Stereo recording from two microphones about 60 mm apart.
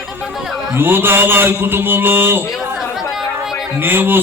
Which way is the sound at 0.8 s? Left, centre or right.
Right.